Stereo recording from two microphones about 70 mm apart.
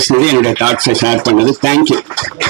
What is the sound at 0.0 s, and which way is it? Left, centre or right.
Speech, right.